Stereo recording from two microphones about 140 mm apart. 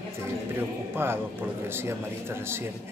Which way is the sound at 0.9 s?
15° right (ahead or behind).